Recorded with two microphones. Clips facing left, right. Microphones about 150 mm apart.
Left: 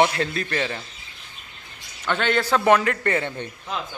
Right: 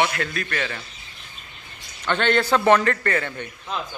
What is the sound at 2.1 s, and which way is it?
A man's voice, 5° left (ahead or behind).